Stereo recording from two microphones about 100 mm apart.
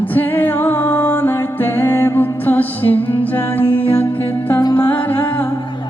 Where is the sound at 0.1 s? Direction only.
20° left (ahead or behind).